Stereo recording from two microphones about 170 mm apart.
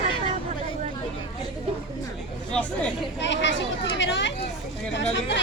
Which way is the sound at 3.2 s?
90° left.